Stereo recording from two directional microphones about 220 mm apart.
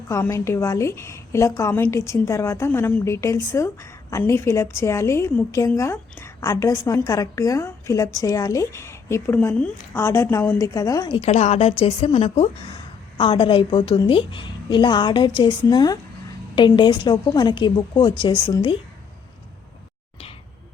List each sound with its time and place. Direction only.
0.1 s a woman's voice: 15° left (ahead or behind)